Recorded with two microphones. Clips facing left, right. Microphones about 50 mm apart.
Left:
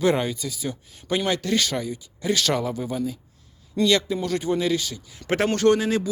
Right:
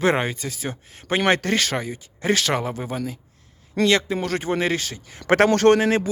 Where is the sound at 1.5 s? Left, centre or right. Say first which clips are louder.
Right 1 dB; right.